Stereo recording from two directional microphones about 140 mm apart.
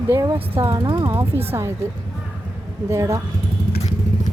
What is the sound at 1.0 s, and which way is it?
Speech, 15° right (ahead or behind).